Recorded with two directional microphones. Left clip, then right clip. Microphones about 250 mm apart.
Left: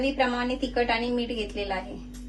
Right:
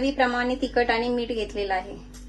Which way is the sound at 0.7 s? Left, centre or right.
Right.